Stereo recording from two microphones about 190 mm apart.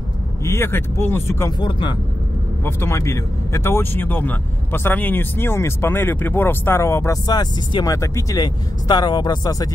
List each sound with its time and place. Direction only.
0.4 s speech: 15° left (ahead or behind)
1.6 s speech: 25° left (ahead or behind)
2.6 s speech: 15° left (ahead or behind)